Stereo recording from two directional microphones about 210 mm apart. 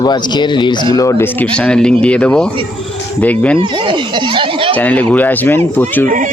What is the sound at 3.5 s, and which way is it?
Speech, 25° right (ahead or behind).